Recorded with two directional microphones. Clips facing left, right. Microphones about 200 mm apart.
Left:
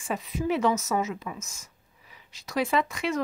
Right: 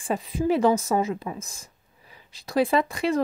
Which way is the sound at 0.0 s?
30° right (ahead or behind).